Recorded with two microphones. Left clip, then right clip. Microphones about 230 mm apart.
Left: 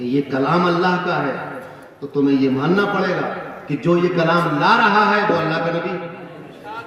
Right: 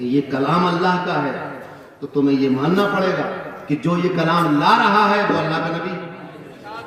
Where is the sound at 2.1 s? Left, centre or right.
Left.